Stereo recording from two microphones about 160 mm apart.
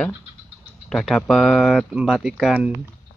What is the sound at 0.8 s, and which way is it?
Speech, centre (ahead or behind).